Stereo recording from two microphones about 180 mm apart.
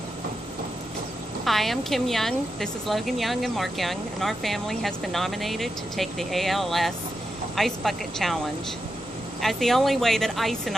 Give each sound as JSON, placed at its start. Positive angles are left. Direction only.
{"t": 1.4, "sound": "a woman's voice", "side_deg": 0}
{"t": 9.4, "sound": "a woman's voice", "side_deg": 0}